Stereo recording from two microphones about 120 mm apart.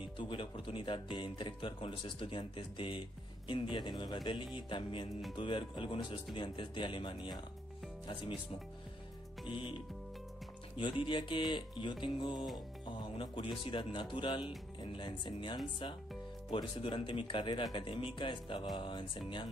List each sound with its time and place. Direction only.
0.2 s speech: 45° left (ahead or behind)
9.5 s speech: 45° left (ahead or behind)